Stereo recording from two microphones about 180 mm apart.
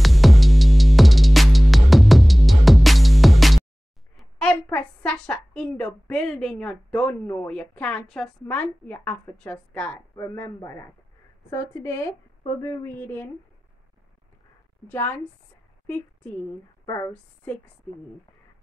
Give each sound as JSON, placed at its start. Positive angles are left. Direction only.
{"t": 0.0, "sound": "music", "side_deg": 0}
{"t": 4.2, "sound": "a woman's voice", "side_deg": 5}
{"t": 14.9, "sound": "a woman's voice", "side_deg": 10}
{"t": 16.8, "sound": "speech", "side_deg": 15}